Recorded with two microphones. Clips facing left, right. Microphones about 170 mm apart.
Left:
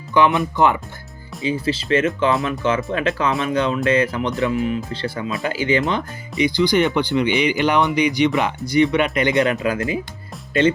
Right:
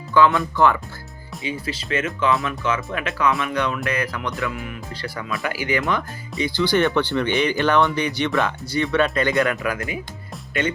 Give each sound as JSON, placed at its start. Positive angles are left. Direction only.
{"t": 0.1, "sound": "speech", "side_deg": 20}